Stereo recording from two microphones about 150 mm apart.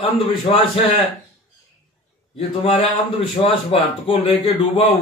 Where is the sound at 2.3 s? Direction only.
40° left (ahead or behind).